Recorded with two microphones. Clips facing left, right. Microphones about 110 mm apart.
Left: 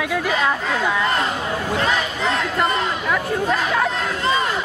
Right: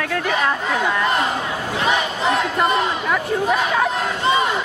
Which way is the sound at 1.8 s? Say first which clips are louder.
Right 2 dB; 15° right (ahead or behind).